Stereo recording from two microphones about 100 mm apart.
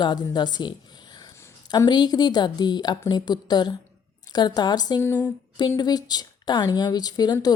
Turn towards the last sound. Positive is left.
turn(degrees=45)  # may be behind; listen again after turning